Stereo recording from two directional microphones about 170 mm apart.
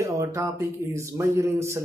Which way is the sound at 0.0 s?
20° right (ahead or behind).